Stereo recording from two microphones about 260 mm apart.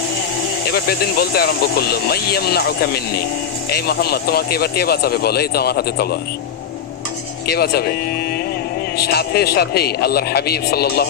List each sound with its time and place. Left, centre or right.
0.7 s speech: left
7.4 s speech: left
9.0 s speech: left